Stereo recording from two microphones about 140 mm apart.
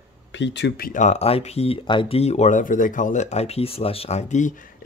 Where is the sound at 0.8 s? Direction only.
70° left (ahead or behind).